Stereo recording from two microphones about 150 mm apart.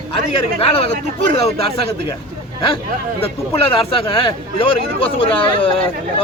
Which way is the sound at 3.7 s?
35° left (ahead or behind).